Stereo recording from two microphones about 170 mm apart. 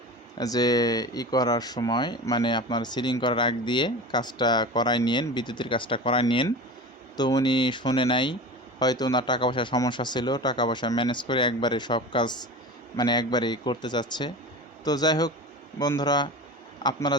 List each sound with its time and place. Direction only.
0.3 s speech: 20° left (ahead or behind)